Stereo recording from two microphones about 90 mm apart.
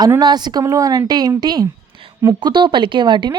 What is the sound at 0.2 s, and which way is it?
Speech, 50° right (ahead or behind).